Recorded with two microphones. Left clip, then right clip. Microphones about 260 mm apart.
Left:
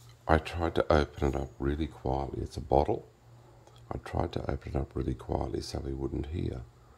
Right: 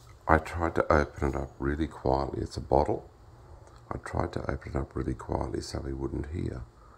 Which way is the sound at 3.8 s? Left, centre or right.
Centre.